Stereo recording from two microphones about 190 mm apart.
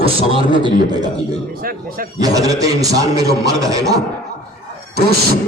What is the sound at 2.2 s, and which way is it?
A man's voice, 20° right (ahead or behind).